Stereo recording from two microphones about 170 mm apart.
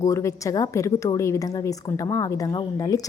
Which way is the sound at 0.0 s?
20° left (ahead or behind).